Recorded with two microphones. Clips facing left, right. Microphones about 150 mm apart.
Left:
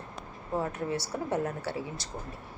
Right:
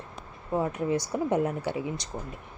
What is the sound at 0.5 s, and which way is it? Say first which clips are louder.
A woman's voice: right 4 dB; 15° right (ahead or behind).